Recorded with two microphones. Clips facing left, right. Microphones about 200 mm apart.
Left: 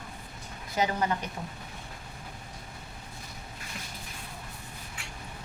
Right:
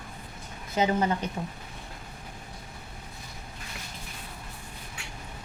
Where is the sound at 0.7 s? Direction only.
25° right (ahead or behind).